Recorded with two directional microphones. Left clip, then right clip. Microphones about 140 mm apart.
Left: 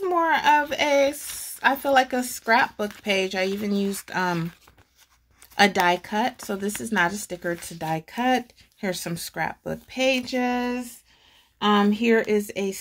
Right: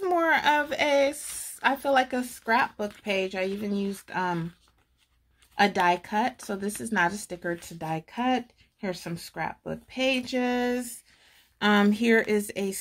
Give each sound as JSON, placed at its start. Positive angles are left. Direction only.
{"t": 0.0, "sound": "a sound", "side_deg": -30}
{"t": 0.3, "sound": "speech", "side_deg": -15}
{"t": 5.6, "sound": "speech", "side_deg": 10}
{"t": 11.6, "sound": "a woman's voice", "side_deg": -20}